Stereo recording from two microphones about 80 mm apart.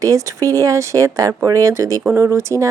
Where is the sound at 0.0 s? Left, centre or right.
Right.